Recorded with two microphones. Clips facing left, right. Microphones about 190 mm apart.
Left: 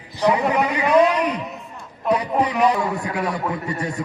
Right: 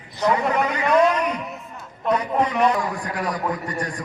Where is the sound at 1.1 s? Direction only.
35° left (ahead or behind).